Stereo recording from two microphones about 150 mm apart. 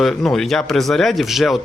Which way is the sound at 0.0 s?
Centre (ahead or behind).